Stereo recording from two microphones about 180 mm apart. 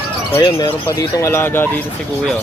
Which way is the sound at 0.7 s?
15° left (ahead or behind).